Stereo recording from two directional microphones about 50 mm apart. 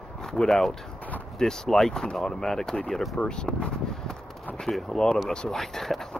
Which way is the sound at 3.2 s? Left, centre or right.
Centre.